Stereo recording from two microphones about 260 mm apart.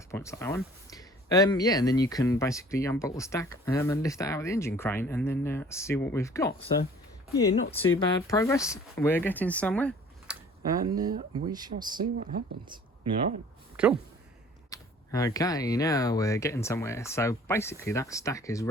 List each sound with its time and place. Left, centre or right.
0.1 s speech: centre
7.9 s speech: centre
10.7 s speech: centre
11.9 s speech: right
13.8 s speech: centre
14.7 s speech: centre